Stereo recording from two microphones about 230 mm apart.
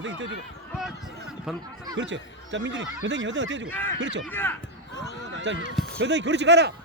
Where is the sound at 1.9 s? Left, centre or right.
Right.